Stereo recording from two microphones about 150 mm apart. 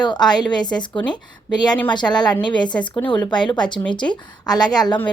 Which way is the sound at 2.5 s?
30° left (ahead or behind).